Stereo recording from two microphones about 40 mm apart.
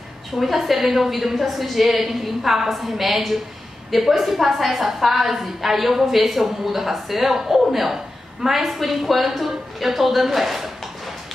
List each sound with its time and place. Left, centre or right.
0.3 s a woman's voice: centre